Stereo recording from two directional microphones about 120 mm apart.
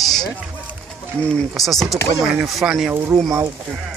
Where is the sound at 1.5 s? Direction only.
Centre (ahead or behind).